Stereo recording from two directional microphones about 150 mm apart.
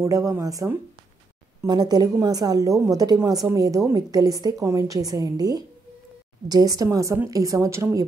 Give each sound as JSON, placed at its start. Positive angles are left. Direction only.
{"t": 0.0, "sound": "a woman's voice", "side_deg": -20}